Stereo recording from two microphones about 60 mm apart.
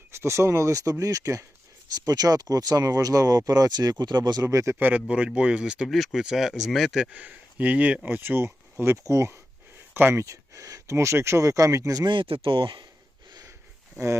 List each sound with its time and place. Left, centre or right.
0.1 s speech: right
2.0 s speech: right
4.4 s a man's voice: right
4.8 s speech: right
5.9 s speech: centre
7.0 s a man's voice: right
10.8 s speech: right